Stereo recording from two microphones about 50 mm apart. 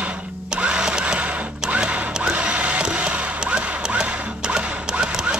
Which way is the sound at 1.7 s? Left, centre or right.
Right.